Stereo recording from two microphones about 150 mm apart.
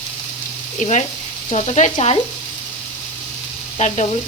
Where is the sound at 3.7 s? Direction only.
50° left (ahead or behind).